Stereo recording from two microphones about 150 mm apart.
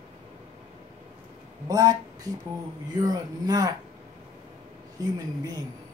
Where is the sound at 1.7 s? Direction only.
25° right (ahead or behind).